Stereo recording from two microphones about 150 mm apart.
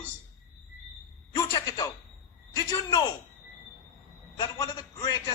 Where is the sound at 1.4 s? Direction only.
25° left (ahead or behind).